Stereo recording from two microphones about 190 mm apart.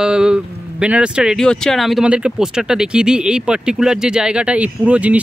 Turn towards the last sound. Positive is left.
turn(degrees=-5)  # may be behind; listen again after turning